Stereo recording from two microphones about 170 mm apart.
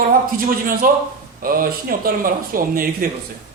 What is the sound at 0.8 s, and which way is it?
Speech, 55° right (ahead or behind).